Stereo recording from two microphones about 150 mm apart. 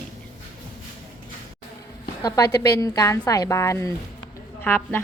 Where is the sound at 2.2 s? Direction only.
20° left (ahead or behind).